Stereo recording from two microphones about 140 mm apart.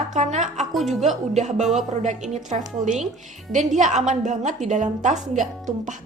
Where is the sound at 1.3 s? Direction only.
55° right (ahead or behind).